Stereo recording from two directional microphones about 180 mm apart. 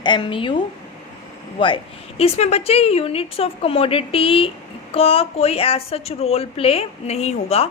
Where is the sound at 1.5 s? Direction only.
25° left (ahead or behind).